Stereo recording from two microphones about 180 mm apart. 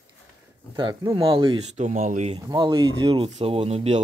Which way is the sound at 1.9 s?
40° right (ahead or behind).